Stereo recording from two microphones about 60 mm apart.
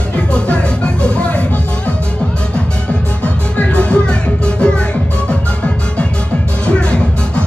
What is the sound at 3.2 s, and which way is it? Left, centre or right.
Music, left.